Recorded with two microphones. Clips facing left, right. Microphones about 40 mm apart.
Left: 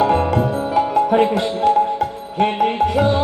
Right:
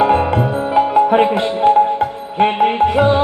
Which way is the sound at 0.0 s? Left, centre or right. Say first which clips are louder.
Right 2 dB; right.